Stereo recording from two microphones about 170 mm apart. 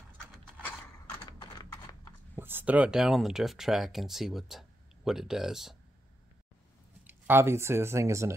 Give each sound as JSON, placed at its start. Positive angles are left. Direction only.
{"t": 1.4, "sound": "typing", "side_deg": 20}
{"t": 2.3, "sound": "speech", "side_deg": -10}
{"t": 7.1, "sound": "speech", "side_deg": -15}